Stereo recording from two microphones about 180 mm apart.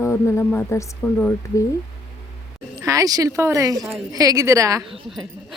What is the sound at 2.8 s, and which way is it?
A woman's voice, 20° right (ahead or behind).